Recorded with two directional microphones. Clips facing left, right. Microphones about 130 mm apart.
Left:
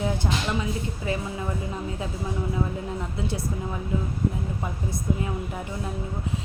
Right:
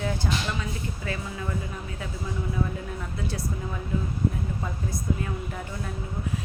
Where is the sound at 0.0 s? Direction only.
20° left (ahead or behind).